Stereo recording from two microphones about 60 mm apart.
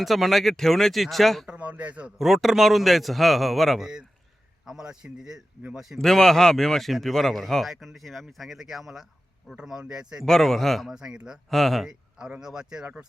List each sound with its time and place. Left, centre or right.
0.0 s speech: centre
1.5 s speech: right
2.1 s a man's voice: centre
6.0 s a man's voice: centre
10.2 s speech: centre
10.9 s a man's voice: centre
11.5 s speech: centre
11.9 s a man's voice: centre